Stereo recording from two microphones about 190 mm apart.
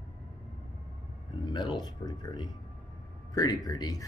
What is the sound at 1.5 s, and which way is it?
Speech, 25° left (ahead or behind).